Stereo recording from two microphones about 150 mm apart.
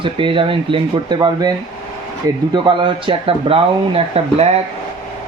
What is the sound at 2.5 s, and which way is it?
Speech, 30° right (ahead or behind).